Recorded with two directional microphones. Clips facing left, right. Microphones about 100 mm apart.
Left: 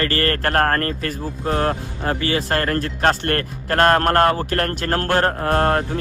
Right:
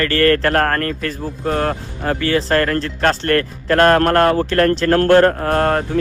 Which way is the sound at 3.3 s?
35° left (ahead or behind).